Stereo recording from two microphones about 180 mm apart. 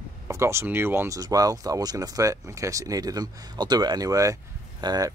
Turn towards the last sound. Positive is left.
turn(degrees=-20)  # may be behind; listen again after turning